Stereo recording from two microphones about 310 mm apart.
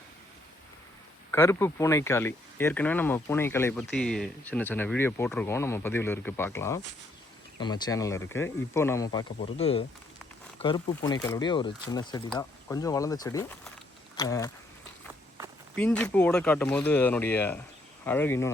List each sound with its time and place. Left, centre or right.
1.3 s speech: centre
15.7 s speech: centre